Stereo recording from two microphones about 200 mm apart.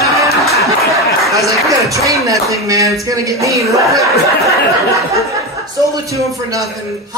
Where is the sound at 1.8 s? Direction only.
15° right (ahead or behind).